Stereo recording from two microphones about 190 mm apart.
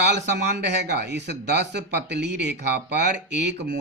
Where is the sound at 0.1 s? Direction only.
60° right (ahead or behind).